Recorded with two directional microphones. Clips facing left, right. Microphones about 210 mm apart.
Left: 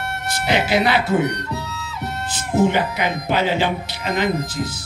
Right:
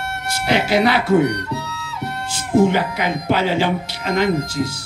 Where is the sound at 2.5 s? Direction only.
10° left (ahead or behind).